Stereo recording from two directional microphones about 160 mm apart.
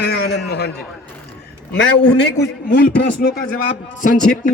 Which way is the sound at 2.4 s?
65° left (ahead or behind).